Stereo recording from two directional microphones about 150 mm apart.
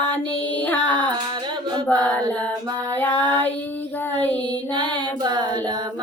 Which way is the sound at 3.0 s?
10° left (ahead or behind).